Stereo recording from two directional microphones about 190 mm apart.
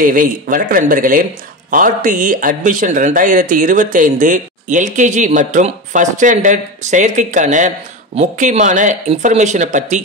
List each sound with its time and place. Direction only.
0.0 s speech: 45° right (ahead or behind)